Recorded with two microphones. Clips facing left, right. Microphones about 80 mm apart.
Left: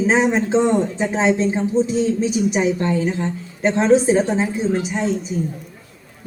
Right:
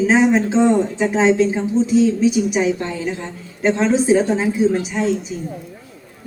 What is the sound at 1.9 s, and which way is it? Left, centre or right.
A woman's voice, left.